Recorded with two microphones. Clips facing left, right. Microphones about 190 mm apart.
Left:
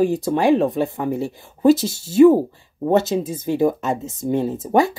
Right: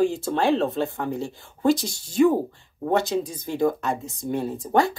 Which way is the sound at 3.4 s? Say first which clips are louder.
Left 5 dB; 15° left (ahead or behind).